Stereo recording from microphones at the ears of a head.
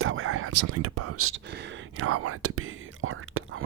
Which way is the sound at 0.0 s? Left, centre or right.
Right.